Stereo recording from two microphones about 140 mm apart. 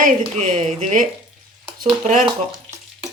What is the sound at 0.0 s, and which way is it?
Speech, 60° right (ahead or behind).